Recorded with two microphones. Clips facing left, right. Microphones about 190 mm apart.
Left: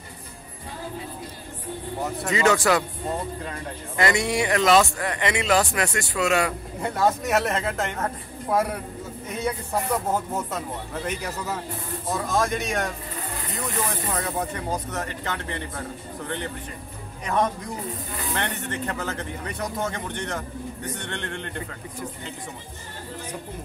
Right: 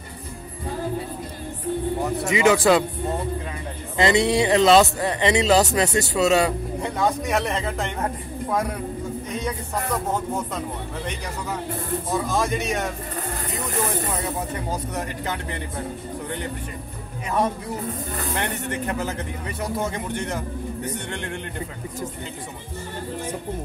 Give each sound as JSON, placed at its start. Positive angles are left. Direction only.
{"t": 2.2, "sound": "speech", "side_deg": -15}
{"t": 3.9, "sound": "speech", "side_deg": -25}
{"t": 6.8, "sound": "speech", "side_deg": 0}
{"t": 12.1, "sound": "speech", "side_deg": 0}
{"t": 14.7, "sound": "speech", "side_deg": -15}
{"t": 17.3, "sound": "speech", "side_deg": -5}